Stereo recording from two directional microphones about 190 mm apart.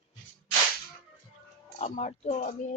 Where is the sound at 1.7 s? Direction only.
35° left (ahead or behind).